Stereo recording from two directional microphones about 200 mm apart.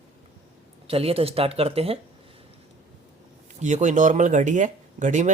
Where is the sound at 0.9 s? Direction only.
30° right (ahead or behind).